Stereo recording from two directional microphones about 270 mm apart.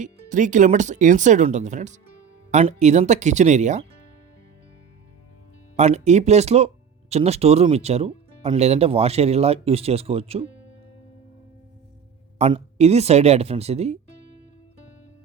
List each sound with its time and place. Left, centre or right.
0.0 s speech: right
5.7 s speech: right
12.4 s speech: right